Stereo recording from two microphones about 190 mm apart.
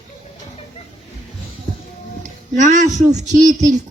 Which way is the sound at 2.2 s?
40° right (ahead or behind).